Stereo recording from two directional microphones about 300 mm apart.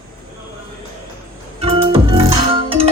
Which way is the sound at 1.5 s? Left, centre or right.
Centre.